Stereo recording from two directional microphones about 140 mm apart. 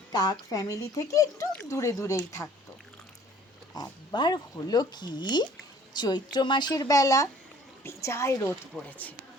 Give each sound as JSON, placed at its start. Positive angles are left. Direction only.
{"t": 0.1, "sound": "speech", "side_deg": 30}
{"t": 3.8, "sound": "speech", "side_deg": 30}
{"t": 8.7, "sound": "speech", "side_deg": 0}